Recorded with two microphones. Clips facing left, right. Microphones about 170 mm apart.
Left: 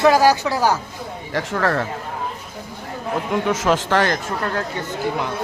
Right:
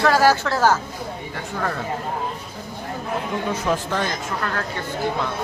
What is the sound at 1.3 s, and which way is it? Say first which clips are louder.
Speech: left 8 dB; 90° left.